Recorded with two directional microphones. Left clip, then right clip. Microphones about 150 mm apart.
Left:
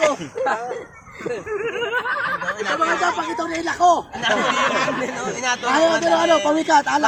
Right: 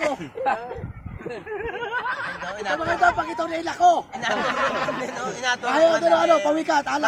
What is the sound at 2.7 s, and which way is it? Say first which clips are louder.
A man's voice: even; 15° right (ahead or behind).